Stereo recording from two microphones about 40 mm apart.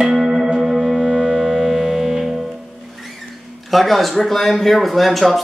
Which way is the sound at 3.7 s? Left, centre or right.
Centre.